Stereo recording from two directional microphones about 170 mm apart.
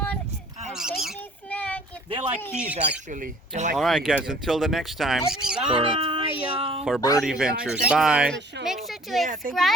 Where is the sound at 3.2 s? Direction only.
45° right (ahead or behind).